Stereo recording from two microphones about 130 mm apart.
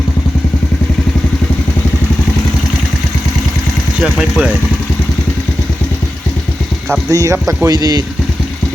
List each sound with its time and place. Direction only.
4.0 s speech: 5° right (ahead or behind)
7.1 s speech: 25° right (ahead or behind)